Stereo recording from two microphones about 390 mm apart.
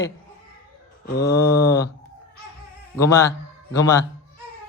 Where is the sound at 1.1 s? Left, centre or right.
Left.